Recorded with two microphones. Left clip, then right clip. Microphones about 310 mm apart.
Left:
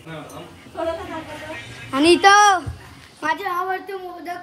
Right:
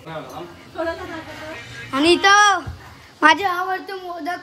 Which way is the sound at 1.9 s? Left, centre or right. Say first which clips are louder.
Left 1 dB; centre.